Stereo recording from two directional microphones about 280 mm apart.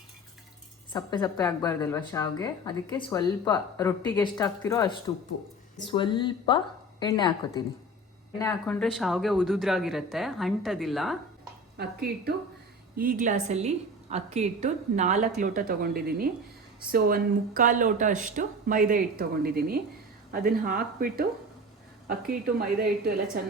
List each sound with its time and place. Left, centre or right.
0.9 s a woman's voice: centre
11.8 s a woman's voice: right